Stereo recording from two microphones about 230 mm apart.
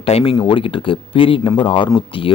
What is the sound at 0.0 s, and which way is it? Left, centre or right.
Speech, left.